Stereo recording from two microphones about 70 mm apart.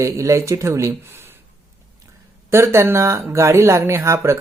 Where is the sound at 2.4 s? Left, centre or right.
Right.